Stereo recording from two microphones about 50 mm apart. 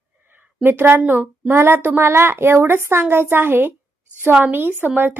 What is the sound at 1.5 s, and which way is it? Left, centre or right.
A woman's voice, right.